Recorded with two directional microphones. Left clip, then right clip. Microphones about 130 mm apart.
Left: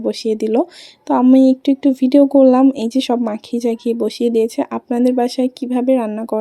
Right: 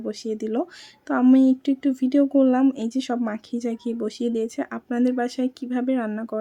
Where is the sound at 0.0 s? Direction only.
35° left (ahead or behind).